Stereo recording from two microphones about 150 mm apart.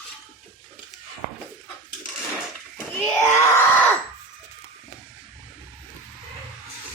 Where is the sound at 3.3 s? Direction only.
15° left (ahead or behind).